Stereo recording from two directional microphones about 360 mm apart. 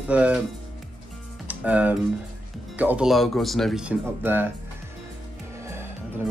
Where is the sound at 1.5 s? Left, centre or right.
Centre.